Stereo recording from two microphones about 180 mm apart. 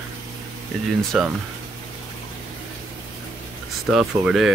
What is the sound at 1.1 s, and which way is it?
Speech, centre (ahead or behind).